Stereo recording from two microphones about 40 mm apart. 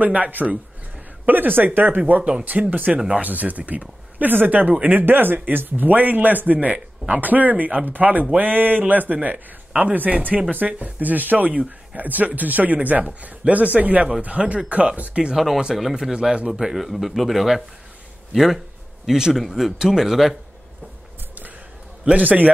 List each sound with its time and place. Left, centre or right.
0.0 s a man's voice: right
1.2 s speech: right
2.0 s a man's voice: right
15.3 s speech: centre
16.0 s speech: centre
19.3 s speech: centre
22.0 s speech: right